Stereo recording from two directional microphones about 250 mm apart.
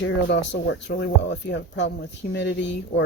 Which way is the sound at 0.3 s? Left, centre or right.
Left.